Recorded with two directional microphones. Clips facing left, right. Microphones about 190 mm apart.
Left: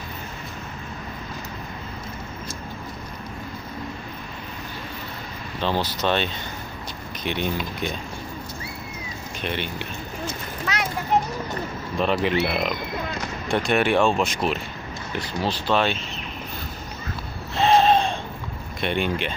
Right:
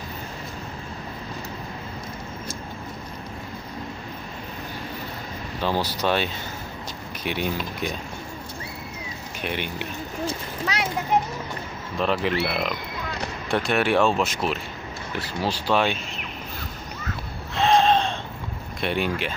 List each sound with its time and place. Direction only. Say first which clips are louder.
5.6 s speech: even; 10° right (ahead or behind)
9.4 s speech: even; 10° right (ahead or behind)
10.2 s speech: right 2 dB; 30° right (ahead or behind)
12.0 s speech: left 2 dB; centre (ahead or behind)
17.6 s gasp: left 1 dB; 5° left (ahead or behind)
18.8 s speech: left 1 dB; 5° right (ahead or behind)